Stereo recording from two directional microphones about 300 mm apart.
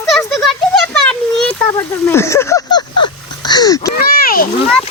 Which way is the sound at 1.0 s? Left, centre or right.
Centre.